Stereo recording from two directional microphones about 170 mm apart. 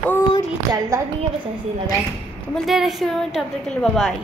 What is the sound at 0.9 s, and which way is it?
Speech, 15° right (ahead or behind).